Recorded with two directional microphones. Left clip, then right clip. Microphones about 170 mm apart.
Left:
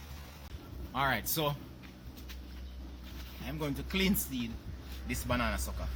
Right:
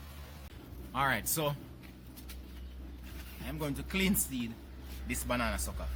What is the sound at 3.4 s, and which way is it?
Speech, centre (ahead or behind).